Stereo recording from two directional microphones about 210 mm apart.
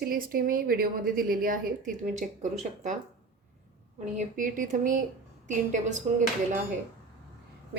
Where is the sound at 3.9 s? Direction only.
35° right (ahead or behind).